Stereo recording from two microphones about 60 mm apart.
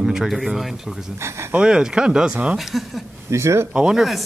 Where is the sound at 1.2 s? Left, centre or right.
Right.